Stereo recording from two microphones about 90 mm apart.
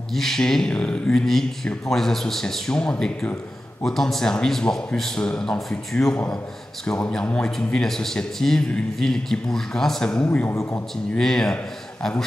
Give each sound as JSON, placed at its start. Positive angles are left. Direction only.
{"t": 0.1, "sound": "a man's voice", "side_deg": 5}
{"t": 10.5, "sound": "a man's voice", "side_deg": 30}
{"t": 11.1, "sound": "a man's voice", "side_deg": 5}